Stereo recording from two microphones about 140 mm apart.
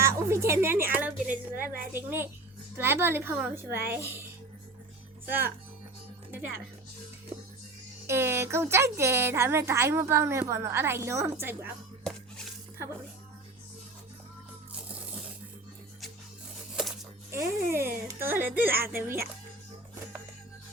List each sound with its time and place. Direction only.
0.0 s music: 20° right (ahead or behind)
1.3 s a woman's voice: 85° right
1.9 s a child's voice: 15° right (ahead or behind)
8.0 s a woman's voice: 20° right (ahead or behind)
16.7 s a sound: 5° right (ahead or behind)
17.3 s a child's voice: 20° right (ahead or behind)